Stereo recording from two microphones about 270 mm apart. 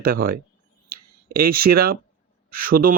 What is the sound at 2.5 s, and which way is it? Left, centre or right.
Speech, right.